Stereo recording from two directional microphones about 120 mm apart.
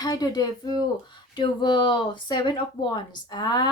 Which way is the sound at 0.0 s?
35° left (ahead or behind).